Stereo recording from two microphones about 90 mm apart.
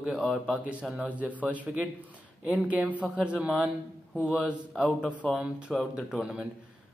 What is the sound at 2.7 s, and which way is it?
A man's voice, 15° right (ahead or behind).